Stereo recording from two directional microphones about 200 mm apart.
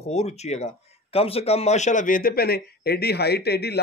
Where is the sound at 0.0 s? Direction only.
35° left (ahead or behind).